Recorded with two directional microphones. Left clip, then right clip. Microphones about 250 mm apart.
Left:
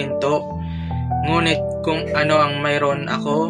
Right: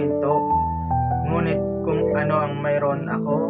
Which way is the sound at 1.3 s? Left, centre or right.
Left.